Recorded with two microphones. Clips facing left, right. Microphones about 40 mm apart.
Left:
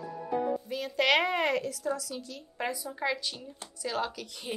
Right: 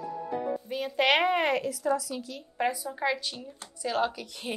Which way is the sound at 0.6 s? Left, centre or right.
Centre.